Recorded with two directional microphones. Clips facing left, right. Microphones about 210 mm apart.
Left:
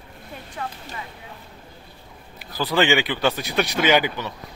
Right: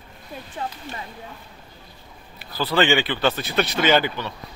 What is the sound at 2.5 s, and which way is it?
A man's voice, 15° left (ahead or behind).